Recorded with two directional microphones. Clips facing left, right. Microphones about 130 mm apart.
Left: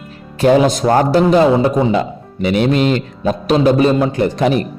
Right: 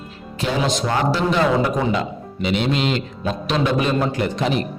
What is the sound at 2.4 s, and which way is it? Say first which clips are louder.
A man's voice: left 7 dB; 50° left (ahead or behind).